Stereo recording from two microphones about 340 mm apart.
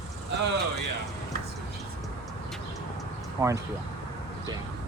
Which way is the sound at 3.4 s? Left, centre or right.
Centre.